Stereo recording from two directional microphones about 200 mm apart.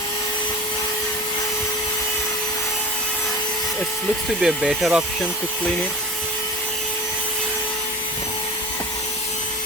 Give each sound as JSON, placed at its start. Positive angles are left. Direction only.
{"t": 4.4, "sound": "speech", "side_deg": 0}